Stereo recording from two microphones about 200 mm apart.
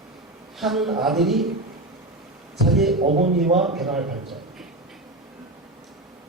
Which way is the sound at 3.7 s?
Centre (ahead or behind).